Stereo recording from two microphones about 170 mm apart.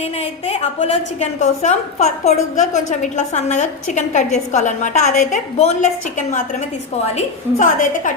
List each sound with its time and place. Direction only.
0.0 s a woman's voice: 40° left (ahead or behind)
7.6 s a woman's voice: 50° left (ahead or behind)